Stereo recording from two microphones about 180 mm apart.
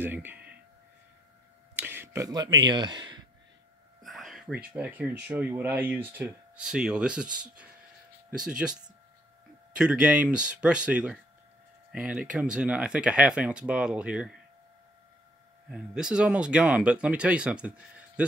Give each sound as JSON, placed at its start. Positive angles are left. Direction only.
{"t": 0.0, "sound": "speech", "side_deg": -10}
{"t": 1.8, "sound": "a sound", "side_deg": -10}
{"t": 2.6, "sound": "speech", "side_deg": -25}
{"t": 4.0, "sound": "speech", "side_deg": 0}
{"t": 9.8, "sound": "speech", "side_deg": -5}
{"t": 15.7, "sound": "speech", "side_deg": -5}